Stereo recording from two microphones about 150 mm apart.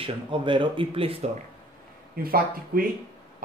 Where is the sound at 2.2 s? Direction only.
75° right (ahead or behind).